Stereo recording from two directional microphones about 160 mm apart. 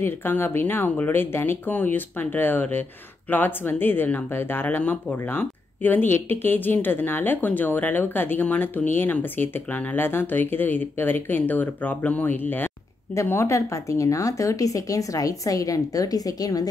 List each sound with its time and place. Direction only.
0.0 s speech: 15° left (ahead or behind)